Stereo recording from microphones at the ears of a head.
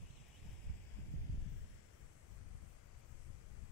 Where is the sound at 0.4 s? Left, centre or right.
Right.